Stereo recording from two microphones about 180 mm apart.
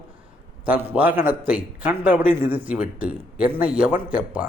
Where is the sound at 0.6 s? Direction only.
10° right (ahead or behind).